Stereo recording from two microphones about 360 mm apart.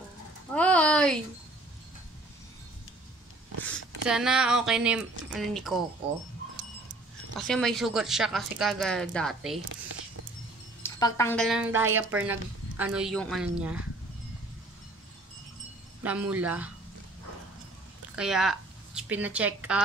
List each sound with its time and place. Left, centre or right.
0.6 s a sound: centre
3.6 s speech: centre
7.3 s speech: centre
10.8 s speech: centre
16.0 s speech: centre
18.1 s speech: centre